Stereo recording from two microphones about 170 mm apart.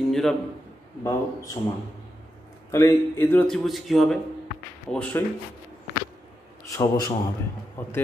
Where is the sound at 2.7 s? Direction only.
15° left (ahead or behind).